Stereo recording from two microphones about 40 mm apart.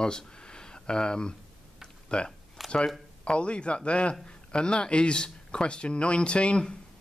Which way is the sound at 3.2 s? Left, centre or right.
Left.